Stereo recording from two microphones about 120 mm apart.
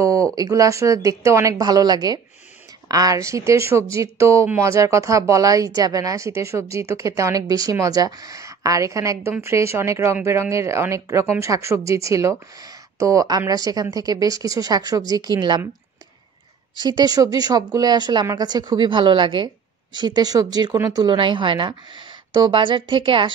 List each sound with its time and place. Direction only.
0.0 s a woman's voice: 30° right (ahead or behind)
16.7 s a woman's voice: 35° right (ahead or behind)